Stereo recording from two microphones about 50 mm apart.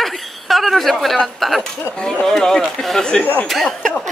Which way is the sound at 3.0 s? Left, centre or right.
Centre.